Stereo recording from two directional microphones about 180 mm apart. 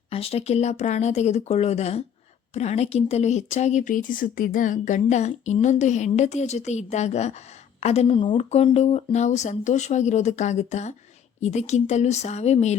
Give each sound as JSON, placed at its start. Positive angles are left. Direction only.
{"t": 0.1, "sound": "speech", "side_deg": 35}